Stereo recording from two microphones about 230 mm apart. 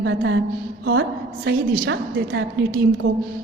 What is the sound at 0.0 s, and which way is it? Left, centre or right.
Speech, right.